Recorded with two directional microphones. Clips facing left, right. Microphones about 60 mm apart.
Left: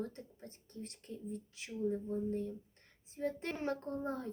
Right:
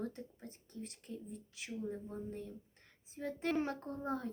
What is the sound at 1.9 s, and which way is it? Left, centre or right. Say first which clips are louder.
A child's voice: left 7 dB; centre.